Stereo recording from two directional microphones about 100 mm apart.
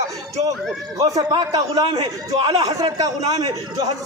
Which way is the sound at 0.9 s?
35° right (ahead or behind).